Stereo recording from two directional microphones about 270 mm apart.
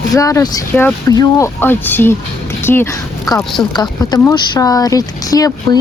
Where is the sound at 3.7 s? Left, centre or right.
Centre.